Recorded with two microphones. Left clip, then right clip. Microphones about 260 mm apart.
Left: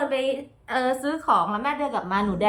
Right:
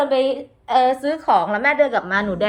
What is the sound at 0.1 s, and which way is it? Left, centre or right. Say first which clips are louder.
A woman's voice: right 6 dB; centre.